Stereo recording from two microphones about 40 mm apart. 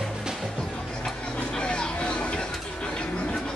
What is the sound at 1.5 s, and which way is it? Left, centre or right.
Vehicle, left.